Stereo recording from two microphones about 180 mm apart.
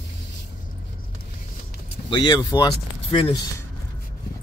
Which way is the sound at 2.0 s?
25° left (ahead or behind).